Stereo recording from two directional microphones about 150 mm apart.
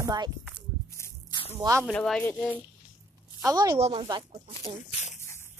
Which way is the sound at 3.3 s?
25° right (ahead or behind).